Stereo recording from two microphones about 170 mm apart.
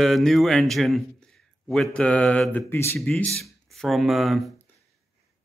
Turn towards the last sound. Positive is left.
turn(degrees=0)  # may be behind; listen again after turning